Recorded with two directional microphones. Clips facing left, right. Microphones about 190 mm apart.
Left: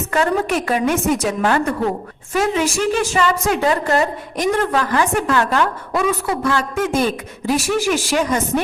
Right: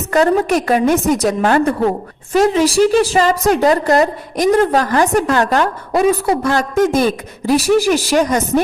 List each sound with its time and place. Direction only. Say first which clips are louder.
0.1 s a woman's voice: right 6 dB; 35° right (ahead or behind)